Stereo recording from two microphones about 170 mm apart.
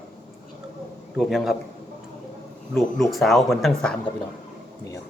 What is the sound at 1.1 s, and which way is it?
Speech, centre (ahead or behind).